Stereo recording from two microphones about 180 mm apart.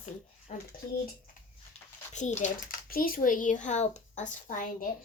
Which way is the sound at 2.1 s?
40° left (ahead or behind).